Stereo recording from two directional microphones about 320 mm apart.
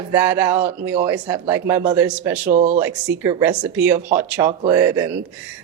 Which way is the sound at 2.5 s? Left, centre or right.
Right.